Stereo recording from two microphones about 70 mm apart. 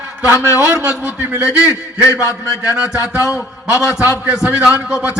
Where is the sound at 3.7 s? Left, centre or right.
Left.